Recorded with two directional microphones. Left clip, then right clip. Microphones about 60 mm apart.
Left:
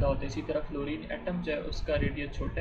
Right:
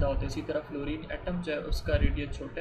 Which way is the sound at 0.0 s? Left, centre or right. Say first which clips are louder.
Left 1 dB; right.